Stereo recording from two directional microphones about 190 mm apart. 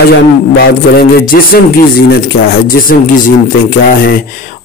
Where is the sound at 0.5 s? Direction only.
55° left (ahead or behind).